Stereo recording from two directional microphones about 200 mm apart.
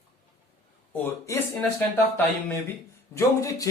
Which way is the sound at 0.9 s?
10° left (ahead or behind).